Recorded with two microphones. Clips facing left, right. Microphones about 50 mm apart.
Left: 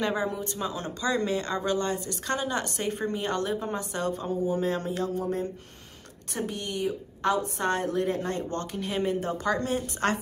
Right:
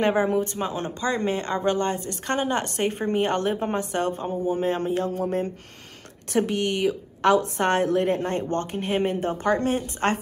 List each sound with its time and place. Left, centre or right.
0.0 s speech: right
6.3 s speech: right